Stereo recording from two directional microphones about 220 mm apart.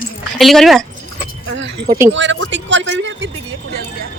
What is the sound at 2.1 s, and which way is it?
A man's voice, 55° right (ahead or behind).